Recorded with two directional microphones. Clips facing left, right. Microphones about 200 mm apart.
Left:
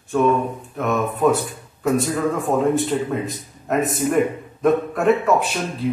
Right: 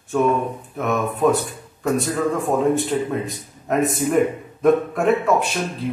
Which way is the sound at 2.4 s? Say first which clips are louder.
Left 1 dB; centre (ahead or behind).